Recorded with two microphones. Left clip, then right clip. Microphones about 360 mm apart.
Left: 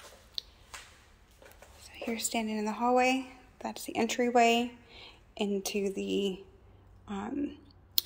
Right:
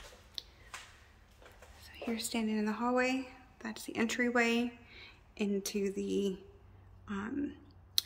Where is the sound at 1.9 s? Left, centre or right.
Centre.